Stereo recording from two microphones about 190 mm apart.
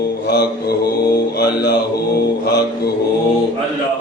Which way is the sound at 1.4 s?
60° left (ahead or behind).